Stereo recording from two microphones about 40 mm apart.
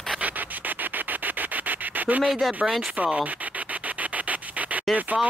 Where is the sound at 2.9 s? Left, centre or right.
Right.